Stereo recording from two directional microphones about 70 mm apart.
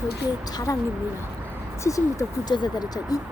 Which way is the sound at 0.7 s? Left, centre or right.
Left.